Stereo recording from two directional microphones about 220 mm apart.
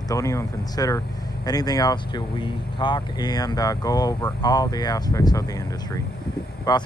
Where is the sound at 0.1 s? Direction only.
15° left (ahead or behind).